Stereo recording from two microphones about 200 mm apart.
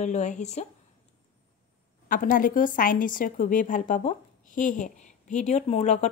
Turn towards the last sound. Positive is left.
turn(degrees=35)  # may be behind; listen again after turning